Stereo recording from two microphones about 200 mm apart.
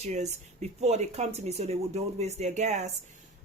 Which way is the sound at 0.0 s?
35° right (ahead or behind).